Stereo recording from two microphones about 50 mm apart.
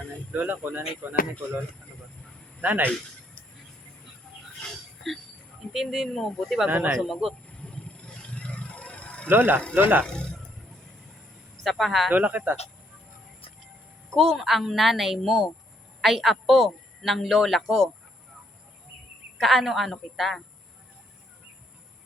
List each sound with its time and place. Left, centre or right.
0.3 s speech: right
2.6 s speech: right
5.7 s a man's voice: centre
6.7 s speech: right
6.9 s a man's voice: centre
7.4 s vehicle: left
9.3 s speech: right
10.1 s speech: centre
11.6 s a man's voice: centre
12.1 s speech: right
14.1 s a man's voice: centre
19.4 s a man's voice: centre